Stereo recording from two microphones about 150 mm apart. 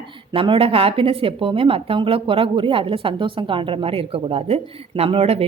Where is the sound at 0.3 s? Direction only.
35° right (ahead or behind).